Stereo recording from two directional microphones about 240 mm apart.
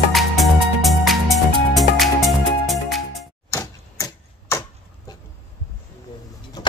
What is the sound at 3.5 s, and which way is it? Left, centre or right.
Typewriter, centre.